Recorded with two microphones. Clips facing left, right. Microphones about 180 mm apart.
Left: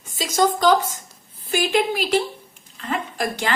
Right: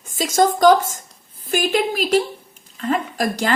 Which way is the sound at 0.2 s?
45° right (ahead or behind).